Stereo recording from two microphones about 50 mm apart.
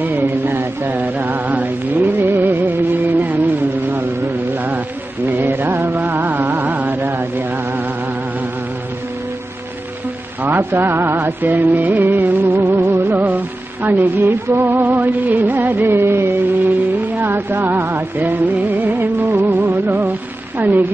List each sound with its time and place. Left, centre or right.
0.0 s mantra: right
2.1 s music: right
4.6 s mantra: right
5.8 s music: right
10.4 s music: right
12.7 s music: right
13.8 s music: right
15.9 s music: right
17.3 s music: right
20.5 s a sound: right